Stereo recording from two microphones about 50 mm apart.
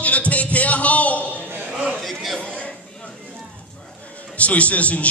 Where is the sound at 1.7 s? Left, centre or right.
Centre.